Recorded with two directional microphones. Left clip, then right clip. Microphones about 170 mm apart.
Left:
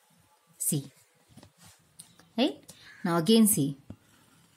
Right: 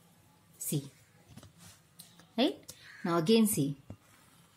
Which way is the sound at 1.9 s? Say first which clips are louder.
Left 2 dB; 10° left (ahead or behind).